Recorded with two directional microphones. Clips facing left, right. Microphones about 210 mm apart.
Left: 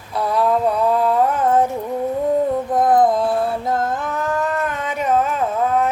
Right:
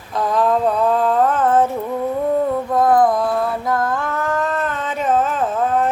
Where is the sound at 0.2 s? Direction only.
10° left (ahead or behind).